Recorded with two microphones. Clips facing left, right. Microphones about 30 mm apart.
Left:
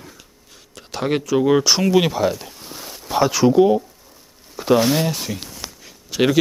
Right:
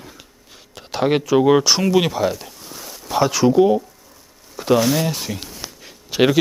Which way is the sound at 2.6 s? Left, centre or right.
Centre.